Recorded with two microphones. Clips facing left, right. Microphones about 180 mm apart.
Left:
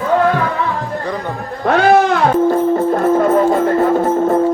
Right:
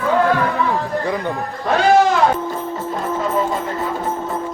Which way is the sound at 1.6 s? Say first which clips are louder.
Left 3 dB; 60° left (ahead or behind).